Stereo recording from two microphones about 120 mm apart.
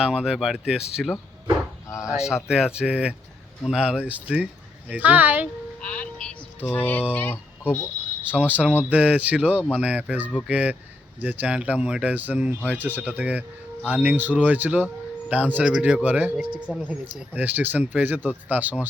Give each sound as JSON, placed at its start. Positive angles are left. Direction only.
{"t": 0.0, "sound": "speech", "side_deg": -5}
{"t": 2.0, "sound": "speech", "side_deg": -5}
{"t": 5.8, "sound": "music", "side_deg": 10}
{"t": 6.7, "sound": "speech", "side_deg": 15}
{"t": 8.2, "sound": "speech", "side_deg": -10}